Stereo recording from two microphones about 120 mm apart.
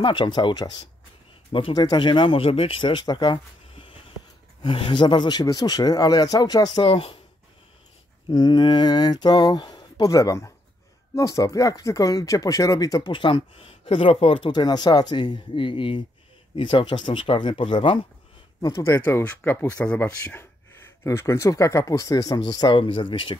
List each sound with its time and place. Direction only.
0.0 s a man's voice: 40° left (ahead or behind)
3.7 s a sound: 50° left (ahead or behind)
4.6 s a man's voice: 45° left (ahead or behind)
8.3 s a man's voice: 35° left (ahead or behind)
13.1 s speech: 45° left (ahead or behind)
18.6 s speech: 30° left (ahead or behind); by 20.3 s 10° left (ahead or behind)
21.0 s a man's voice: 20° left (ahead or behind); by 23.3 s 45° left (ahead or behind)